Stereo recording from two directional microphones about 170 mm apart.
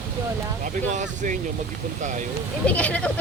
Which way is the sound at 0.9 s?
45° right (ahead or behind).